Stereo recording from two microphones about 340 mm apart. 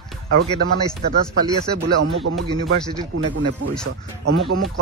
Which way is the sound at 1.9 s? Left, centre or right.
Right.